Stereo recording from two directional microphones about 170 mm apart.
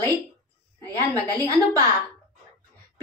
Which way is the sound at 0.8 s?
10° left (ahead or behind).